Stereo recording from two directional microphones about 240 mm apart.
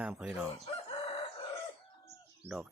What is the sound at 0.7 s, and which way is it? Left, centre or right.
Chicken, left.